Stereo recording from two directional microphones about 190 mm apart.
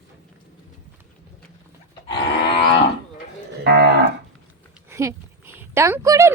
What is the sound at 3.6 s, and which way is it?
Moo, 60° right (ahead or behind).